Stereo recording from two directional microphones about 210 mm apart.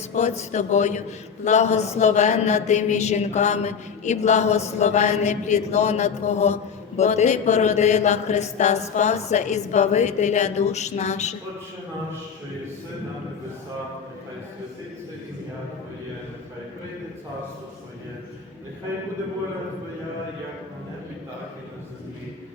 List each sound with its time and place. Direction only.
0.1 s a man's voice: 35° left (ahead or behind)